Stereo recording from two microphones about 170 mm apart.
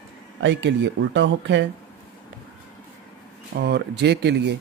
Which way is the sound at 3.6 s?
80° right.